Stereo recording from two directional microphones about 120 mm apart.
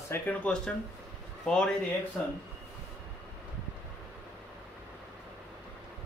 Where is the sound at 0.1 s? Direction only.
10° left (ahead or behind).